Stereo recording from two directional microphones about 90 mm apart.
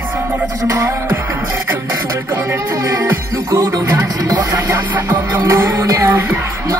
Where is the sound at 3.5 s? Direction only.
45° right (ahead or behind).